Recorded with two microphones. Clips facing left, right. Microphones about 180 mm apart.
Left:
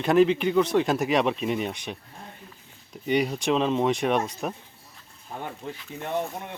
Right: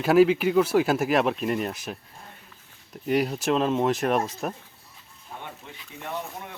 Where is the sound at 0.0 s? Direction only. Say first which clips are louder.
Right 1 dB; 5° right (ahead or behind).